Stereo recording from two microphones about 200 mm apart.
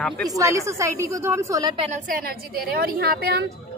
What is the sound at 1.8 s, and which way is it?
A woman's voice, 40° right (ahead or behind).